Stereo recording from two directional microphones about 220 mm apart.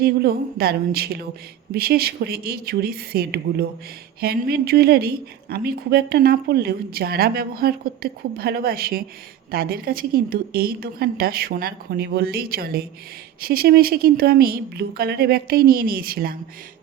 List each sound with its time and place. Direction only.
0.0 s a woman's voice: 45° right (ahead or behind)